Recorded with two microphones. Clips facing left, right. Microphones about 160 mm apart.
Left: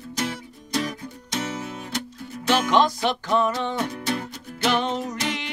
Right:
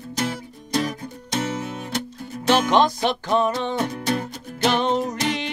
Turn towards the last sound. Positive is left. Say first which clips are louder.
# right 4 dB
turn(degrees=-35)  # may be behind; listen again after turning